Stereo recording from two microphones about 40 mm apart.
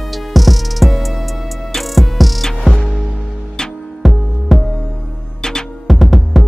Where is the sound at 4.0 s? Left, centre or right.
Centre.